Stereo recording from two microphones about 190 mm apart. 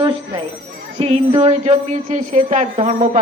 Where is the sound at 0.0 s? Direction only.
25° right (ahead or behind).